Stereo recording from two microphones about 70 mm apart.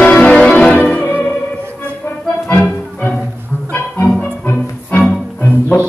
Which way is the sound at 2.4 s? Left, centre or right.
Left.